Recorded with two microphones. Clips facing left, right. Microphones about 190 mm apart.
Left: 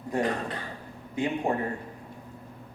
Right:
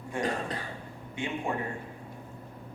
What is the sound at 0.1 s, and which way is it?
Speech, 35° left (ahead or behind).